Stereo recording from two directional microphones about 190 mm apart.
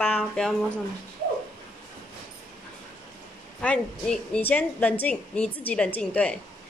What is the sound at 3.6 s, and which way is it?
A woman's voice, 5° left (ahead or behind).